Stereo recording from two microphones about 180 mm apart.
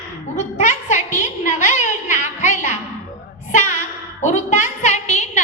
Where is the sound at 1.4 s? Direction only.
45° left (ahead or behind).